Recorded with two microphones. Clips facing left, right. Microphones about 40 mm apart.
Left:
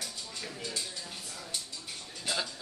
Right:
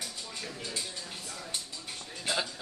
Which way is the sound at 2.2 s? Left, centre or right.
Centre.